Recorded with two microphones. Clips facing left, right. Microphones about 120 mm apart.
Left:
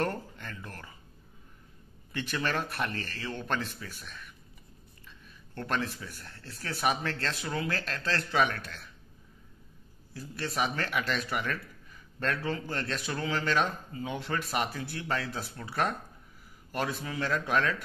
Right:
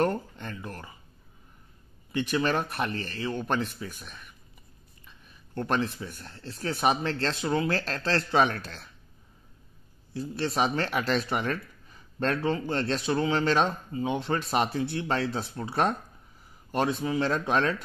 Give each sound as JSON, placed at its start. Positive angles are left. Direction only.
{"t": 0.0, "sound": "a sound", "side_deg": -20}
{"t": 2.1, "sound": "speech", "side_deg": -20}
{"t": 5.5, "sound": "speech", "side_deg": -25}
{"t": 10.1, "sound": "speech", "side_deg": -25}